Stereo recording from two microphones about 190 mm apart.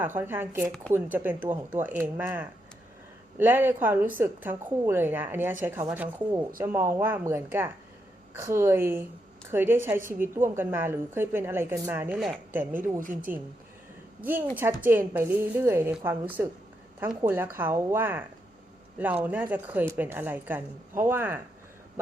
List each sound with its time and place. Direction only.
0.0 s a woman's voice: 10° right (ahead or behind)
13.0 s speech: 45° right (ahead or behind)
14.2 s a woman's voice: 10° right (ahead or behind)